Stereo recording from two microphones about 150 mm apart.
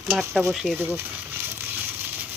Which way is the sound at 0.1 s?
5° left (ahead or behind).